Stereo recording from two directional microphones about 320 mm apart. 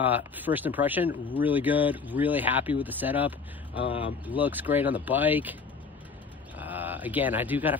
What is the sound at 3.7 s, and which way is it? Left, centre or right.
Speech, centre.